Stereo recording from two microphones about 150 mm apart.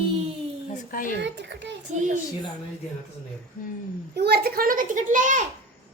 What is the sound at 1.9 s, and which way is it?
Speech, 55° right (ahead or behind).